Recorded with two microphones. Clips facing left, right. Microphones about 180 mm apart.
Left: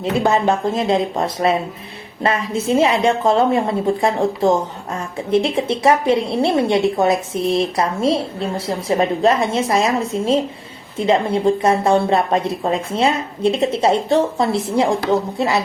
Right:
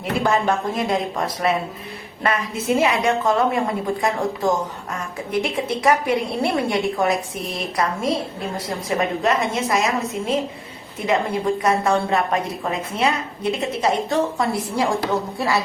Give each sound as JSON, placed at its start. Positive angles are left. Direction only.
{"t": 0.0, "sound": "a woman's voice", "side_deg": 25}